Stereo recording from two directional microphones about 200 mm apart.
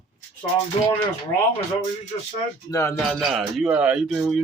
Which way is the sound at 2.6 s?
15° left (ahead or behind).